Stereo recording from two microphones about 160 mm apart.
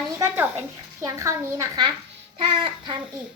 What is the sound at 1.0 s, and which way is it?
Speech, 20° right (ahead or behind).